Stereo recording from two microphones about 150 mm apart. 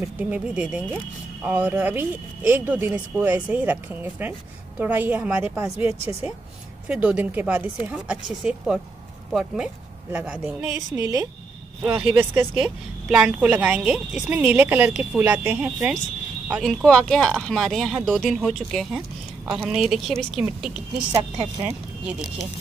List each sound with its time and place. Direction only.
0.2 s a woman's voice: 10° right (ahead or behind)
6.9 s a woman's voice: 10° right (ahead or behind)
10.9 s a woman's voice: 20° right (ahead or behind)
11.8 s a woman's voice: 10° right (ahead or behind)
21.1 s speech: 35° right (ahead or behind)
21.6 s speech: 10° right (ahead or behind)